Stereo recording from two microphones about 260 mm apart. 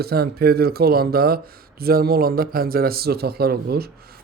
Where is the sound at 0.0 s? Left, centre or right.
Right.